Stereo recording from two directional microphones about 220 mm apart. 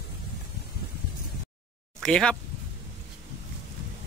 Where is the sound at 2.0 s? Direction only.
5° left (ahead or behind).